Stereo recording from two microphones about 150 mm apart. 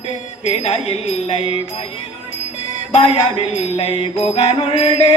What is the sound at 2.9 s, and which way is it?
Speech, 40° left (ahead or behind).